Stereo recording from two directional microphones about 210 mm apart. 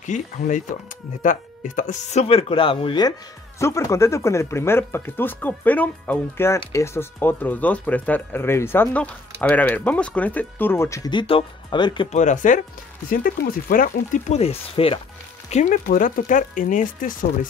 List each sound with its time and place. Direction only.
0.0 s speech: 35° left (ahead or behind)
12.2 s speech: 35° left (ahead or behind)